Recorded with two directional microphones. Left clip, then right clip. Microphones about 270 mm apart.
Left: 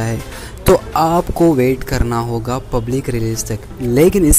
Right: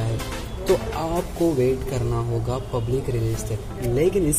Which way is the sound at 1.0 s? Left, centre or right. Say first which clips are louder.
Left 10 dB; left.